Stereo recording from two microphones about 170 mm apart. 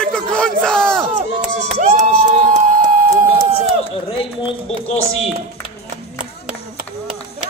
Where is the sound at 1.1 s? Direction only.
45° right (ahead or behind).